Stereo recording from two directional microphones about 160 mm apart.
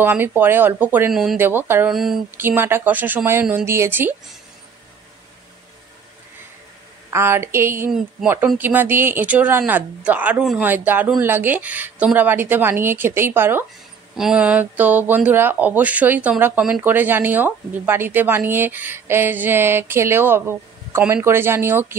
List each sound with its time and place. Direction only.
0.0 s speech: 15° right (ahead or behind)
1.4 s speech: 15° right (ahead or behind)
1.9 s speech: centre (ahead or behind)
2.3 s speech: 15° right (ahead or behind)
7.1 s speech: 15° right (ahead or behind)